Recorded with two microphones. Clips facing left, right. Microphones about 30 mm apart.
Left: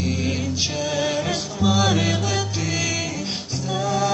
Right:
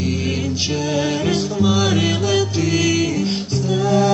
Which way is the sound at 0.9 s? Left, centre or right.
Centre.